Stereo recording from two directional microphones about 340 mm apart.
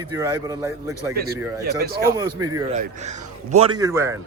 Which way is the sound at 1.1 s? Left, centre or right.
Right.